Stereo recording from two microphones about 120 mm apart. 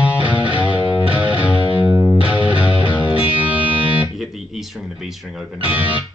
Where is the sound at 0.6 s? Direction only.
45° left (ahead or behind).